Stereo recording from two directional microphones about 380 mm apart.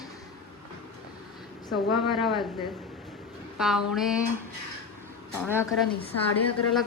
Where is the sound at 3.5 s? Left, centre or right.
Centre.